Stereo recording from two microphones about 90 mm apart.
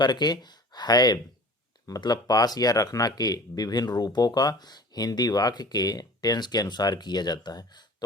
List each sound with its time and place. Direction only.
0.0 s speech: 50° left (ahead or behind)